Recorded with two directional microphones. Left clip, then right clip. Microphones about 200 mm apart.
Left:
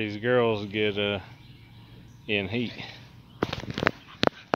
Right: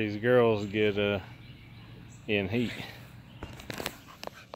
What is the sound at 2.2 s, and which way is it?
Speech, 5° right (ahead or behind).